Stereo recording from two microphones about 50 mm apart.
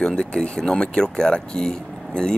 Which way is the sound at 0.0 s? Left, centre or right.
Centre.